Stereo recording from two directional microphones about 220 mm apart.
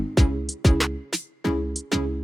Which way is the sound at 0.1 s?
Centre (ahead or behind).